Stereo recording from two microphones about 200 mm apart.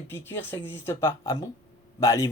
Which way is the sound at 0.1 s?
10° left (ahead or behind).